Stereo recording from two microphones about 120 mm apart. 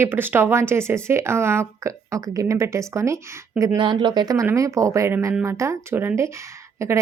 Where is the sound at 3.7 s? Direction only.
40° right (ahead or behind).